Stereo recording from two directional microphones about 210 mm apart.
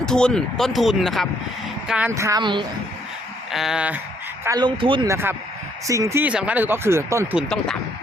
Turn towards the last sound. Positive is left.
turn(degrees=-10)  # may be behind; listen again after turning